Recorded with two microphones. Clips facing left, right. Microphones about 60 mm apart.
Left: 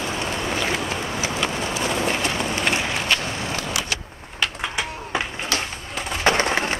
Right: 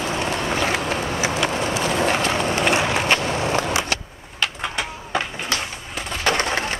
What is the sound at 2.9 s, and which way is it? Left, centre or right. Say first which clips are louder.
Skateboard: right 4 dB; right.